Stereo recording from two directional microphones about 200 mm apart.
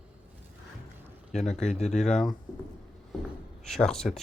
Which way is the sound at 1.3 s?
35° left (ahead or behind).